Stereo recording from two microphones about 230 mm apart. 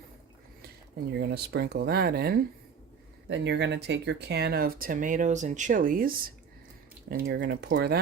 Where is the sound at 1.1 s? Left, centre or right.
Right.